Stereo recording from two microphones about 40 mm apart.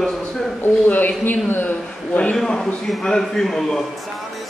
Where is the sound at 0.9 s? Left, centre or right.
Left.